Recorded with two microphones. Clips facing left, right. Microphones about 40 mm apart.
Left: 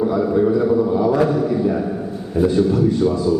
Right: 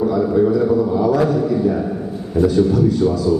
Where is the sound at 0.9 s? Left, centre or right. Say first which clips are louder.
Even; centre.